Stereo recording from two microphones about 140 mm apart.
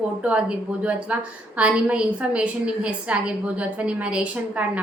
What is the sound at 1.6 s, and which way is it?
A woman's voice, 10° right (ahead or behind).